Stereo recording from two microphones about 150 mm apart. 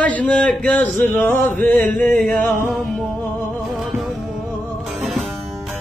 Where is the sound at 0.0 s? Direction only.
10° left (ahead or behind).